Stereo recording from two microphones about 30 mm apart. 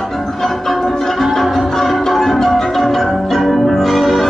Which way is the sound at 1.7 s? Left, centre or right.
Centre.